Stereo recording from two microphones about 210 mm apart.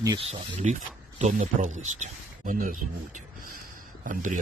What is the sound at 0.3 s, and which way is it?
Speech, 35° right (ahead or behind).